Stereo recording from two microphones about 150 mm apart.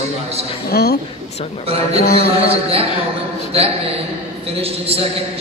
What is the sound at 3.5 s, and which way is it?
A man's voice, 40° right (ahead or behind).